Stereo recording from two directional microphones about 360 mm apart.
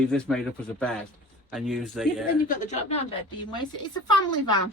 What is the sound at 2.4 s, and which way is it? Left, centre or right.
Speech, centre.